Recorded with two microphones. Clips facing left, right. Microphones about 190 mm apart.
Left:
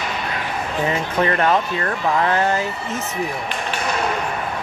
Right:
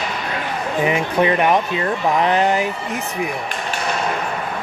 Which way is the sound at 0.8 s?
15° right (ahead or behind).